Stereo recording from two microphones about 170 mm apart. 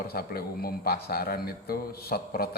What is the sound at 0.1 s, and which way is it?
A man's voice, 65° left (ahead or behind).